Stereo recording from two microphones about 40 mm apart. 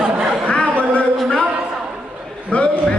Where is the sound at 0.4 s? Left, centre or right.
Left.